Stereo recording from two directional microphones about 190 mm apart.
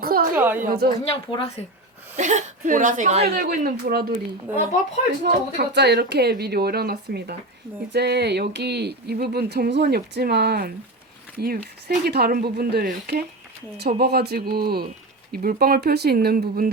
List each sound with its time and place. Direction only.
0.0 s a sound: 50° right (ahead or behind)
0.3 s a woman's voice: 10° right (ahead or behind)
0.6 s speech: 50° right (ahead or behind)
1.1 s speech: 30° left (ahead or behind)
2.1 s speech: 40° right (ahead or behind)
3.2 s speech: 50° right (ahead or behind)
5.2 s speech: 60° right (ahead or behind)